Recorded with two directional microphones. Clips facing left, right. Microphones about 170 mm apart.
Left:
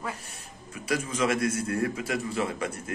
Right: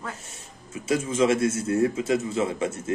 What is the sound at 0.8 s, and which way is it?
Speech, 25° right (ahead or behind).